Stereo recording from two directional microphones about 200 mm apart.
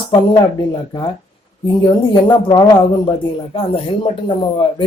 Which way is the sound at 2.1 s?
20° left (ahead or behind).